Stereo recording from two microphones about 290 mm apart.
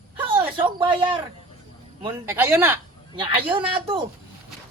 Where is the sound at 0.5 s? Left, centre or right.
Centre.